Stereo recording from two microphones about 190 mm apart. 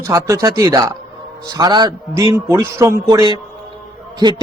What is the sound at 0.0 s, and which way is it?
A man's voice, 15° right (ahead or behind).